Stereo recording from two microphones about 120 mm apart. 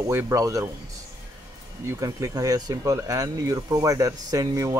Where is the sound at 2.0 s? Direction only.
30° right (ahead or behind).